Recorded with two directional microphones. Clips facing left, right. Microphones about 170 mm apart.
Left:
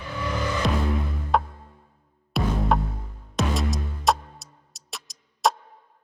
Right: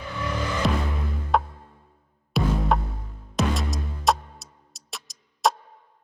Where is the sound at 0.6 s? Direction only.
Centre (ahead or behind).